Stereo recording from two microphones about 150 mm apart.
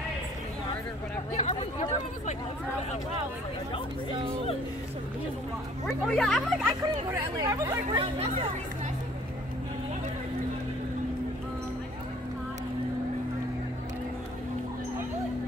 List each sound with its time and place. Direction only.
1.3 s speech: 45° left (ahead or behind)
5.9 s speech: 5° left (ahead or behind)
7.1 s speech: 20° right (ahead or behind)